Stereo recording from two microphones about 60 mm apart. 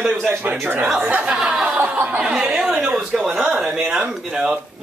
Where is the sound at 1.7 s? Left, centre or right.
Right.